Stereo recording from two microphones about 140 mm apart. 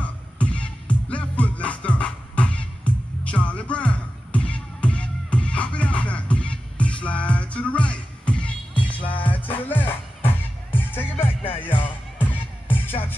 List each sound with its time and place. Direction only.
0.0 s music: 10° left (ahead or behind)
11.1 s music: 40° left (ahead or behind)
11.5 s music: 15° left (ahead or behind)